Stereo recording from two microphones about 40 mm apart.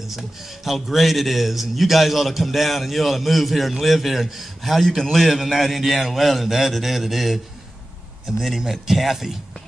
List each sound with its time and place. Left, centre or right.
0.7 s a man's voice: centre